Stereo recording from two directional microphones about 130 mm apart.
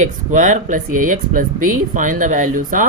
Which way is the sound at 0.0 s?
75° right (ahead or behind).